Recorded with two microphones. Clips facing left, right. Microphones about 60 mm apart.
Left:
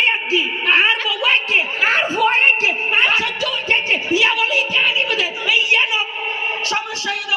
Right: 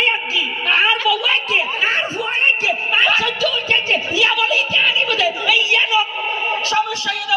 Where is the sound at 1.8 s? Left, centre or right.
Left.